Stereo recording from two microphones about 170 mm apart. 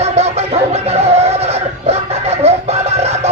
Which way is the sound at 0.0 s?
40° right (ahead or behind).